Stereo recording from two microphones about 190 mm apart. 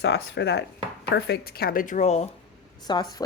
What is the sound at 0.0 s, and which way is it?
A woman's voice, 65° left (ahead or behind).